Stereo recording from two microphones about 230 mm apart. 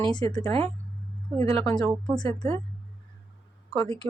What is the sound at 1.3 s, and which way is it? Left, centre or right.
Speech, right.